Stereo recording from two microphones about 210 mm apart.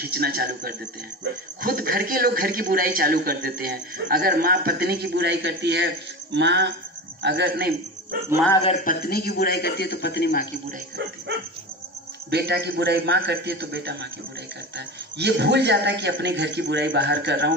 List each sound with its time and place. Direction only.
0.0 s speech: 45° right (ahead or behind)
8.8 s a man's voice: 45° left (ahead or behind)
12.3 s speech: 50° right (ahead or behind)